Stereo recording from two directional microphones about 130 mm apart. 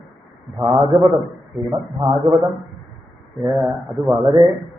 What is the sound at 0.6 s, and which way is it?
Speech, 40° right (ahead or behind).